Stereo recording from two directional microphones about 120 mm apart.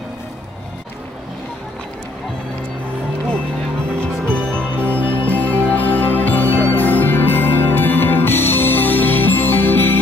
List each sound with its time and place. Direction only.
4.0 s music: 10° left (ahead or behind)